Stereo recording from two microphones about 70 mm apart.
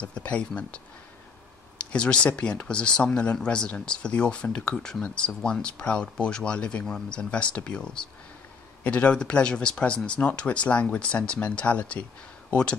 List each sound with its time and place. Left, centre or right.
0.0 s speech: centre
1.8 s speech: centre